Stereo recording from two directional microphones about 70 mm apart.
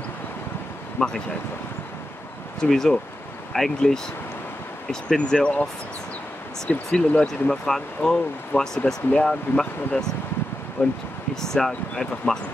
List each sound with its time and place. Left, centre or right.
0.9 s speech: centre
2.6 s speech: centre
6.7 s speech: centre
10.8 s speech: left
11.4 s speech: centre